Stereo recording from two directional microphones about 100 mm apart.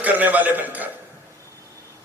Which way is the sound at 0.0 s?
15° right (ahead or behind).